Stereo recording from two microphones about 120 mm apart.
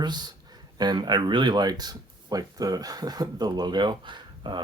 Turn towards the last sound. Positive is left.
turn(degrees=-40)  # may be behind; listen again after turning